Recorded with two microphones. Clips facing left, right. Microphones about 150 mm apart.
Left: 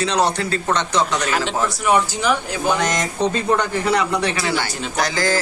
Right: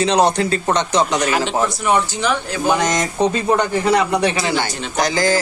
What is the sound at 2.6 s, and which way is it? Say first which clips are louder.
Speech: right 3 dB; 15° right (ahead or behind).